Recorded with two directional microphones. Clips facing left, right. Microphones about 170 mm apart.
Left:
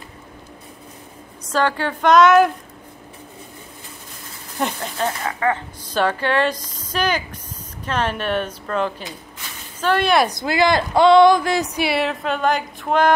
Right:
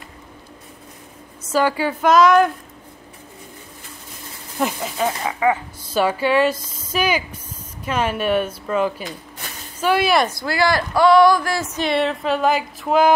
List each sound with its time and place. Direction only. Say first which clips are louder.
1.5 s speech: right 2 dB; 10° right (ahead or behind)
4.6 s speech: right 2 dB; 5° right (ahead or behind)
10.3 s speech: left 2 dB; 20° left (ahead or behind); by 13.1 s 5° right (ahead or behind)